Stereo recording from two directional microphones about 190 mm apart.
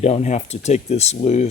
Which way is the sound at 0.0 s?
35° left (ahead or behind).